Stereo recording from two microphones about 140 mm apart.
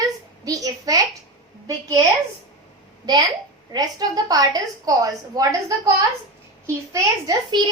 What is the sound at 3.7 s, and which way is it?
A woman's voice, 25° right (ahead or behind).